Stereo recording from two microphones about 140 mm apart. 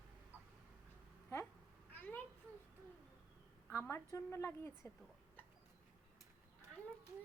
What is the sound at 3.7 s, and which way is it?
A woman's voice, 15° left (ahead or behind).